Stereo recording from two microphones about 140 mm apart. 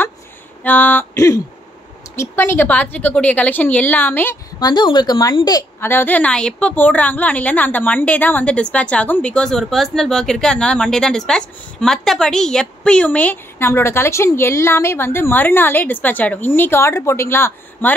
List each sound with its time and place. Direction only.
0.7 s a woman's voice: 10° left (ahead or behind)
4.6 s a woman's voice: 30° left (ahead or behind)